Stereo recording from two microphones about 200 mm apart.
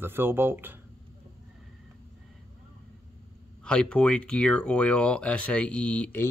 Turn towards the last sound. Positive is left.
turn(degrees=10)  # may be behind; listen again after turning